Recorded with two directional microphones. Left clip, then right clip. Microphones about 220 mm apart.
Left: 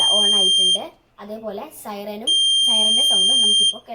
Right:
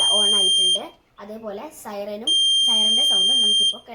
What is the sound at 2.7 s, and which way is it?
Speech, 25° left (ahead or behind).